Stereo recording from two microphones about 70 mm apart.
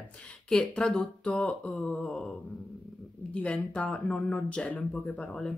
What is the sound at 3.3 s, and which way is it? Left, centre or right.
Speech, centre.